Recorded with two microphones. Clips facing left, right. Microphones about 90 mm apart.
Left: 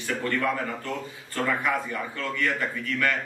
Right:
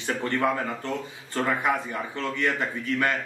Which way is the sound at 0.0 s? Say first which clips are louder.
Right 1 dB; 30° right (ahead or behind).